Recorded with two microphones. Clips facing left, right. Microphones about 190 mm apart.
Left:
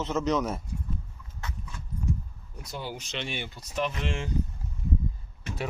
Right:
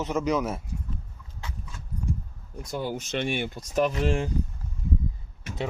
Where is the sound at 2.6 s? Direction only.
50° right (ahead or behind).